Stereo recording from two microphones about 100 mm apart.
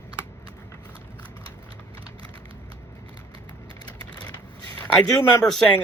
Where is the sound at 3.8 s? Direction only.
45° left (ahead or behind).